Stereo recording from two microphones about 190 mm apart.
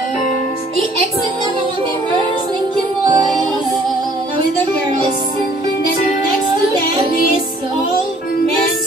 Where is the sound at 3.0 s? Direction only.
20° right (ahead or behind).